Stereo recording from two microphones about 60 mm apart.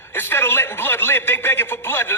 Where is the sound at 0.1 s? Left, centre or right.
Left.